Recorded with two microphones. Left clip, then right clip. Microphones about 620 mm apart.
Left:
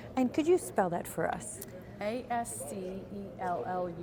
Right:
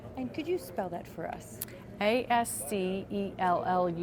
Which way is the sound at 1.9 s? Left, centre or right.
Right.